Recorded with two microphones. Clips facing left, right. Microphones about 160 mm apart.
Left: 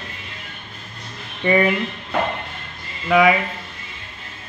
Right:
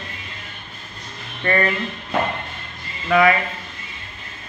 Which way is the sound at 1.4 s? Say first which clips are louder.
Left 3 dB; 10° left (ahead or behind).